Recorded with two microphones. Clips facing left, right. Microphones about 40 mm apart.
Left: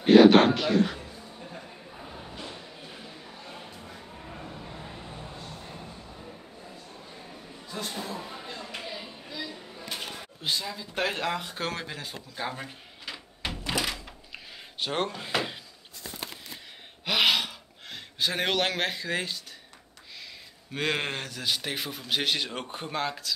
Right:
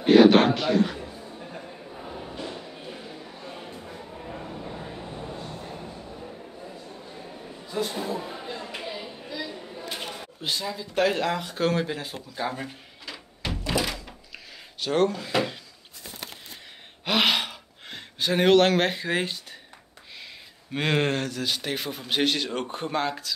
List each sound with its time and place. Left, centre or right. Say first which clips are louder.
0.0 s a sound: even; centre
2.3 s music: right 5 dB; centre
3.7 s a sound: right 4 dB; centre
5.7 s subway: right 5 dB; centre
6.9 s a sound: right 4 dB; centre
10.2 s speech: right 1 dB; centre
11.7 s speech: right 8 dB; centre
13.0 s door: right 1 dB; centre
14.3 s a sound: left 3 dB; left
17.0 s gasp: right 1 dB; centre
19.0 s speech: right 4 dB; centre
20.7 s speech: right 5 dB; centre